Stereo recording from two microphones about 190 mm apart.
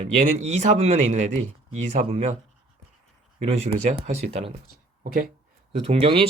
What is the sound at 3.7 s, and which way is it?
Speech, 40° right (ahead or behind).